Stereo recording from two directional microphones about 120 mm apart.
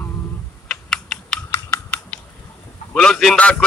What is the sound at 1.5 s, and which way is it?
Typing, 15° left (ahead or behind).